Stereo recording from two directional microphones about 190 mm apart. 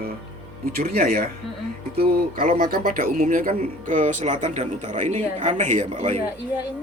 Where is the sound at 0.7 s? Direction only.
50° right (ahead or behind).